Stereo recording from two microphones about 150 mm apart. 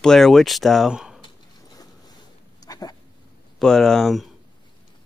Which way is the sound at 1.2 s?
25° left (ahead or behind).